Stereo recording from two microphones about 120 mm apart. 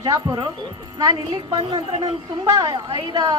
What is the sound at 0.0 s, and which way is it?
A woman's voice, 35° right (ahead or behind).